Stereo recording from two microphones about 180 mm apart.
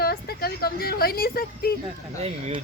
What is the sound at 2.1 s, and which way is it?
Speech, 35° right (ahead or behind).